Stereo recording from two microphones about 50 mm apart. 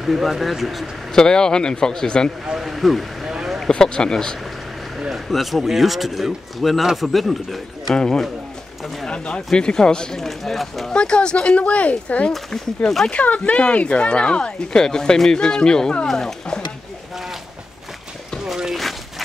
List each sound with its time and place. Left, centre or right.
0.0 s speech: centre
1.1 s speech: centre
2.4 s speech: centre
3.4 s a sound: centre
3.7 s speech: centre
5.1 s speech: centre
7.9 s speech: centre
10.9 s speech: centre
18.4 s a sound: centre